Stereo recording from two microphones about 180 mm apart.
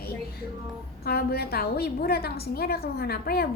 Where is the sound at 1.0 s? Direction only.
60° left (ahead or behind).